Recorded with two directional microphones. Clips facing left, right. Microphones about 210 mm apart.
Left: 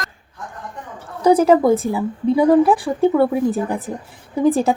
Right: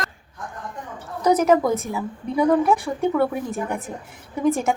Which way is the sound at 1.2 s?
30° left (ahead or behind).